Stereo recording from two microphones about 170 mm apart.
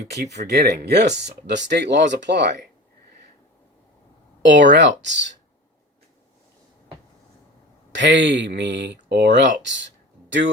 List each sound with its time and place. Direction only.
0.0 s speech: 80° right
4.4 s speech: 90° right
7.9 s speech: 90° right